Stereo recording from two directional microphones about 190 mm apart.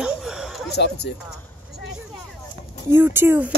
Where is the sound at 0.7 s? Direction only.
60° left (ahead or behind).